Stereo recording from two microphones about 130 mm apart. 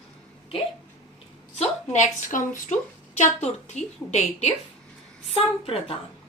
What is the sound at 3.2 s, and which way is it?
A woman's voice, 65° left (ahead or behind).